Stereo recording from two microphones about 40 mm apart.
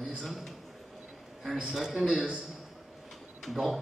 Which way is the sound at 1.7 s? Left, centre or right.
Centre.